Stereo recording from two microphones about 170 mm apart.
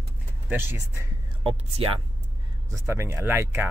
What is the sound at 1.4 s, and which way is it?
Speech, 30° right (ahead or behind).